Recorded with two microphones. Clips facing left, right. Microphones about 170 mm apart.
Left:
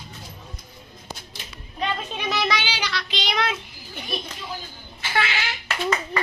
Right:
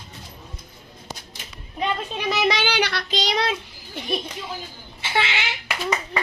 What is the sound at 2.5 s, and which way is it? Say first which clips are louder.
Child singing: right 5 dB; 60° right (ahead or behind).